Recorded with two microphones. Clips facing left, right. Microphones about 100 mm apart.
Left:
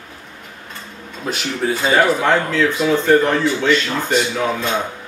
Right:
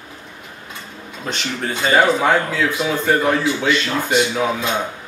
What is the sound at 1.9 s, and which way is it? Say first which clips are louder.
Speech: right 1 dB; 10° right (ahead or behind).